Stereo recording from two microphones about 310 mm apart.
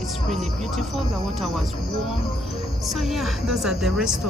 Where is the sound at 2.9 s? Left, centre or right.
Centre.